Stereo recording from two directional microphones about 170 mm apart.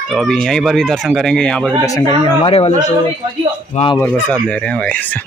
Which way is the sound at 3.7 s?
30° left (ahead or behind).